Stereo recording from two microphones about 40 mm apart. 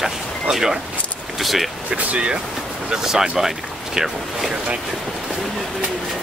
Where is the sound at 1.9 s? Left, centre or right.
Right.